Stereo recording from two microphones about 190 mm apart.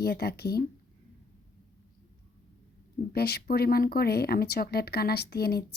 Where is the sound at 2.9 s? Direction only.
55° left (ahead or behind).